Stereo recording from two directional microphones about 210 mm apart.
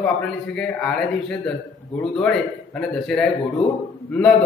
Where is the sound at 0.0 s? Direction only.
5° left (ahead or behind).